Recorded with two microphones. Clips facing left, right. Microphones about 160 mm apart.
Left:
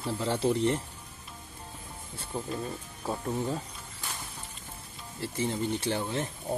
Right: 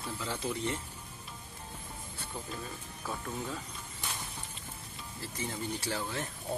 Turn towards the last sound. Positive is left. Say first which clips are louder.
# left 5 dB
turn(degrees=20)  # may be behind; listen again after turning